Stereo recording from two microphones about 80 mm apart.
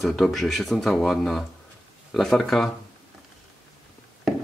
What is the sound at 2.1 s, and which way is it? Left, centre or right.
Speech, centre.